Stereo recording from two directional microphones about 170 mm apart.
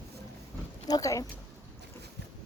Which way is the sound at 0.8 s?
20° left (ahead or behind).